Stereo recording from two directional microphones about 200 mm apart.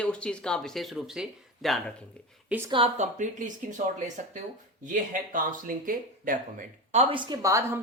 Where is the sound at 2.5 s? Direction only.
10° right (ahead or behind).